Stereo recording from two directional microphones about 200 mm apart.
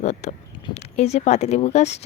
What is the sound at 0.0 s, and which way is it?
Speech, 35° left (ahead or behind).